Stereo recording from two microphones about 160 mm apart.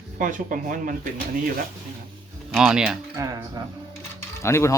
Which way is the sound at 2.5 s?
5° right (ahead or behind).